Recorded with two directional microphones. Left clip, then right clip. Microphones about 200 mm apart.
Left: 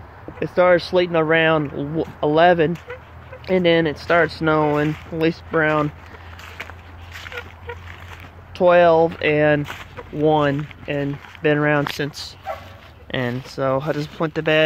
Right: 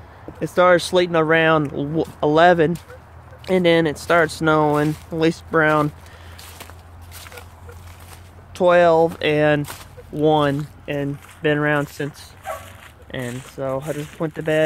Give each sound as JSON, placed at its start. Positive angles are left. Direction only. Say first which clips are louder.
{"t": 0.4, "sound": "speech", "louder": "right 1 dB", "side_deg": -20}
{"t": 8.5, "sound": "speech", "louder": "left 1 dB", "side_deg": -15}
{"t": 13.1, "sound": "speech", "louder": "left 5 dB", "side_deg": 20}